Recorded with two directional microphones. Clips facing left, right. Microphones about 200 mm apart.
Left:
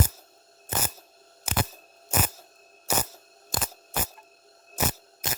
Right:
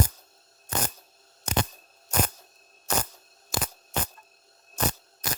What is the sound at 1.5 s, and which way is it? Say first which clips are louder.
Camera: right 4 dB; 5° left (ahead or behind).